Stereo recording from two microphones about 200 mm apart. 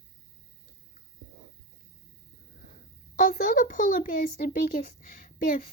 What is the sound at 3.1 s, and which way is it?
A child's voice, 45° left (ahead or behind).